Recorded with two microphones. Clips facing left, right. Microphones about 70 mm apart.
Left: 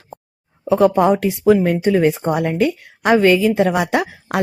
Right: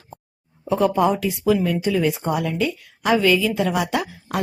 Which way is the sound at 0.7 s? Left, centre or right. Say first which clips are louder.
Left 5 dB; left.